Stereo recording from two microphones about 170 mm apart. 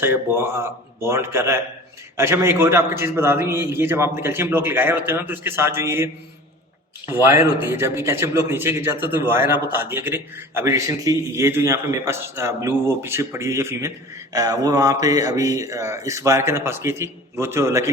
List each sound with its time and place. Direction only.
0.0 s speech: 15° right (ahead or behind)